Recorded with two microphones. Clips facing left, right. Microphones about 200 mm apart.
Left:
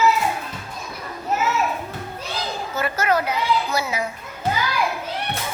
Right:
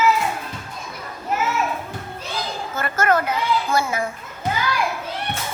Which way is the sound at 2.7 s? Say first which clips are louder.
Right 1 dB; 50° right (ahead or behind).